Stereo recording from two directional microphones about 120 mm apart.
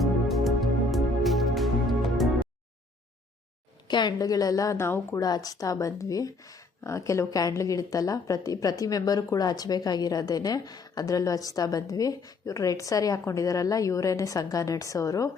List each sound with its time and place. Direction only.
0.0 s music: centre (ahead or behind)
3.8 s a woman's voice: 35° left (ahead or behind); by 5.2 s 20° left (ahead or behind)
5.2 s a woman's voice: 30° left (ahead or behind)